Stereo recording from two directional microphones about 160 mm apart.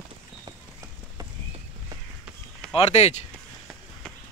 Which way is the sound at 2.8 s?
40° left (ahead or behind).